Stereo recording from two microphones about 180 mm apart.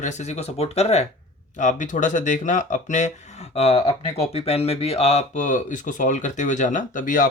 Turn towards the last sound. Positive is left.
turn(degrees=45)  # may be behind; listen again after turning